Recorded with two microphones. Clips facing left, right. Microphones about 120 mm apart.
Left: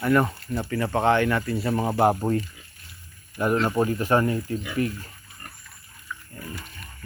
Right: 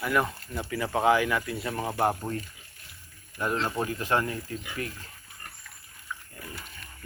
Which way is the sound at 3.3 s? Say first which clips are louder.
Left 7 dB; 10° left (ahead or behind).